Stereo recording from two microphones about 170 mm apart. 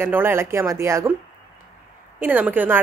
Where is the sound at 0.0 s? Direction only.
15° right (ahead or behind).